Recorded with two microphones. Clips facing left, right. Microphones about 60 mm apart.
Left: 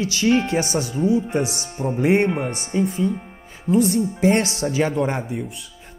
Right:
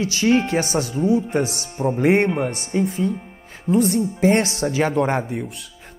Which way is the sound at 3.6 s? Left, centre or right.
Right.